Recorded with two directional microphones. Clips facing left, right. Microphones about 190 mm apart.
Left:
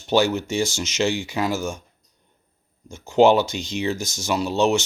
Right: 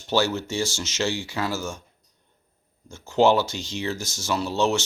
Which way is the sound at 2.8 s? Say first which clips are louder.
Left 4 dB; 15° left (ahead or behind).